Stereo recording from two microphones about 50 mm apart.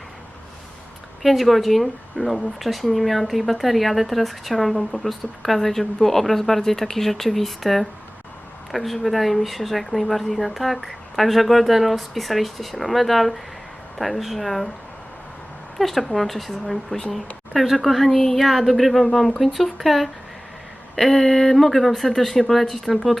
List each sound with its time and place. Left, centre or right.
1.2 s speech: centre
15.8 s speech: centre